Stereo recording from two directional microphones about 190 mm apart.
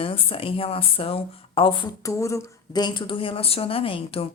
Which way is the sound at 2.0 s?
15° left (ahead or behind).